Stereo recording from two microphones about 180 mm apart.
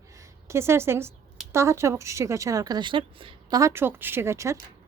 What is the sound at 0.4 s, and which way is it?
A woman's voice, 15° right (ahead or behind).